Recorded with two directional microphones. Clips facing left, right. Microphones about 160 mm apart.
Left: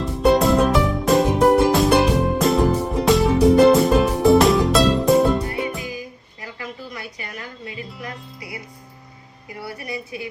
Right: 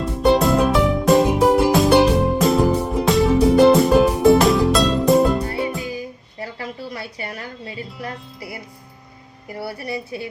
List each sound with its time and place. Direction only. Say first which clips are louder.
0.0 s music: even; centre (ahead or behind)
6.4 s a sound: right 4 dB; 30° right (ahead or behind)
9.8 s a woman's voice: right 1 dB; 35° right (ahead or behind)